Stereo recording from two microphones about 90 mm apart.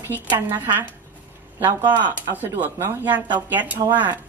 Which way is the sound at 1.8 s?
55° right (ahead or behind).